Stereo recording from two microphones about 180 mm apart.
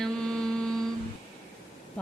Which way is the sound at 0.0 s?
5° left (ahead or behind).